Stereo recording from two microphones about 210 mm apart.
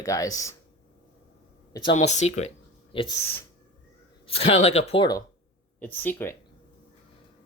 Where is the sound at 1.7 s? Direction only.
25° left (ahead or behind).